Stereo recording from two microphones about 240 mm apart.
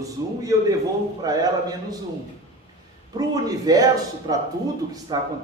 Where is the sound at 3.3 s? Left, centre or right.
Centre.